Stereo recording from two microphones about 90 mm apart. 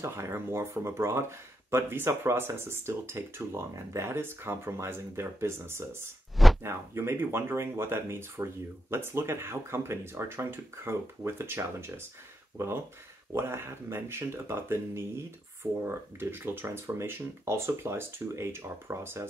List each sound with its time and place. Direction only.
0.0 s speech: 30° right (ahead or behind)
6.3 s a sound: centre (ahead or behind)
6.6 s speech: 30° right (ahead or behind)
13.3 s speech: 30° right (ahead or behind)